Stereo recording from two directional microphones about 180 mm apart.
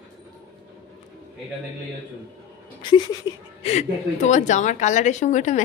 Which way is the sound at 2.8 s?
25° left (ahead or behind).